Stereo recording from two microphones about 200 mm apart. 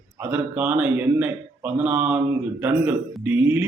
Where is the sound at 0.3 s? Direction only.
10° right (ahead or behind).